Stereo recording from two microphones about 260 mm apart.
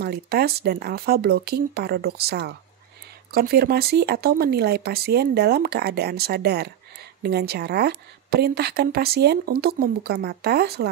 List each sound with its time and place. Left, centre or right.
0.0 s a woman's voice: right